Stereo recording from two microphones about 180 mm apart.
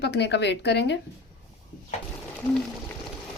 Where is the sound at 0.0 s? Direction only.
70° left (ahead or behind).